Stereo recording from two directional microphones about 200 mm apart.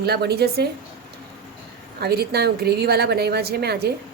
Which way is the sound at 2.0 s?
50° right (ahead or behind).